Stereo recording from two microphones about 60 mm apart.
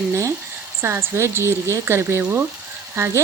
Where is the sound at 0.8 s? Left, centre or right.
Right.